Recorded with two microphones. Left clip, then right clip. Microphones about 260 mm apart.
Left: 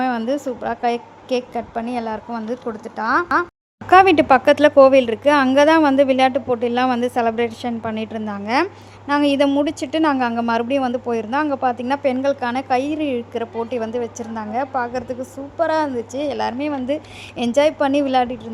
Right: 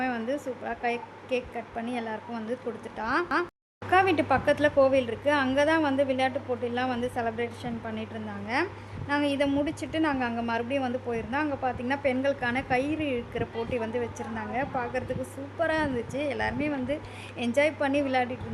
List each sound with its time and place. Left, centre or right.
0.0 s speech: centre
3.8 s speech: left